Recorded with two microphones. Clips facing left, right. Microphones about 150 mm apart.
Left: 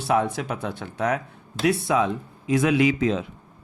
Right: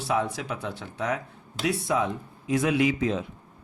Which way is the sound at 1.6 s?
80° left.